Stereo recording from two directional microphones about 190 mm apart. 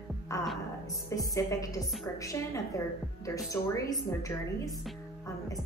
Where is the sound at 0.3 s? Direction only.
15° left (ahead or behind).